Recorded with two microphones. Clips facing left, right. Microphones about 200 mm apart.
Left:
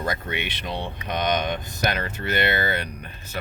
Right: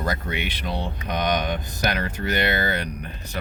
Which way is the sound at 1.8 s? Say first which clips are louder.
Right 1 dB; 15° right (ahead or behind).